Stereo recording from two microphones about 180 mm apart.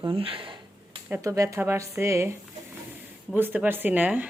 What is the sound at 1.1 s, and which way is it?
Speech, 20° right (ahead or behind).